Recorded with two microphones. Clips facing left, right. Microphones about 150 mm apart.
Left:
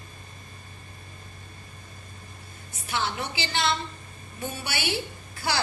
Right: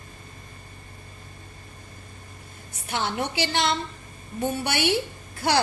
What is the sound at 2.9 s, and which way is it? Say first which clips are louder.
Speech: right 3 dB; 60° right (ahead or behind).